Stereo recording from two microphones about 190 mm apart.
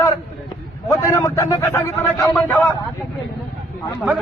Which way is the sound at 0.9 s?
15° left (ahead or behind).